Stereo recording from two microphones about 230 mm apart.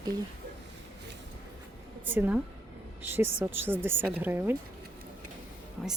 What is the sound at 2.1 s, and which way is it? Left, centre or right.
Speech, centre.